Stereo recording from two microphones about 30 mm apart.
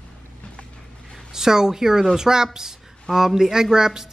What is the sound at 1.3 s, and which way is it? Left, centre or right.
A woman's voice, centre.